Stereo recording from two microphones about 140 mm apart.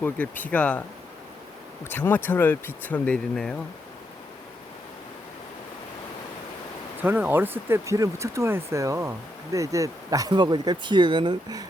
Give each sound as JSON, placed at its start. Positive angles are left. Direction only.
{"t": 0.0, "sound": "speech", "side_deg": 10}
{"t": 1.8, "sound": "speech", "side_deg": 15}
{"t": 7.0, "sound": "speech", "side_deg": -15}